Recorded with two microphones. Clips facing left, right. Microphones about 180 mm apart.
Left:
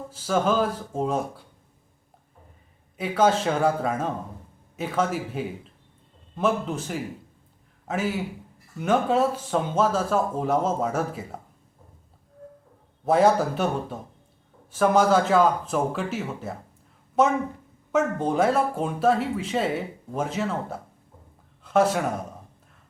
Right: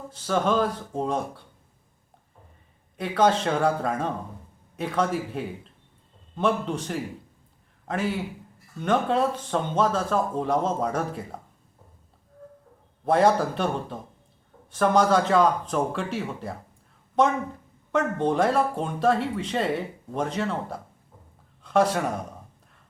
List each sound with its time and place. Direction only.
0.1 s speech: 5° left (ahead or behind)
3.0 s speech: 5° left (ahead or behind)
13.1 s speech: 5° left (ahead or behind)